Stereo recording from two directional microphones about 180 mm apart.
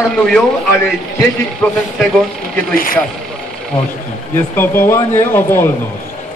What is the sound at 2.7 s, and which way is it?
Speech, 50° left (ahead or behind).